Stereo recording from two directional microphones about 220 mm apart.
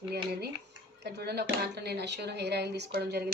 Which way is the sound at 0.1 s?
45° right (ahead or behind).